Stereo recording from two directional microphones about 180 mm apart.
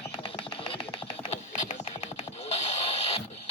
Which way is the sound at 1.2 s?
35° left (ahead or behind).